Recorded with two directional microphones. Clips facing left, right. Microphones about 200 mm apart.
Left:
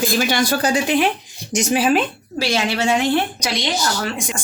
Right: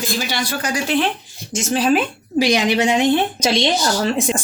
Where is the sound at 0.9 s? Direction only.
15° left (ahead or behind).